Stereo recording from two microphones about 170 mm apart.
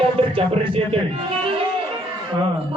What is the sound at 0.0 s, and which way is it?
Speech, 30° right (ahead or behind).